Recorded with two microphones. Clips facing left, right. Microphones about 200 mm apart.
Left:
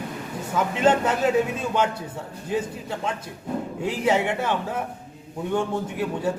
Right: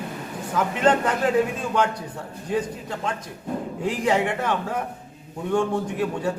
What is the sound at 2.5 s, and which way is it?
A man's voice, 10° left (ahead or behind).